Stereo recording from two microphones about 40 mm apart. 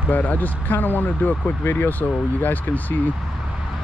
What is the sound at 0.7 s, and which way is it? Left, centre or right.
Speech, left.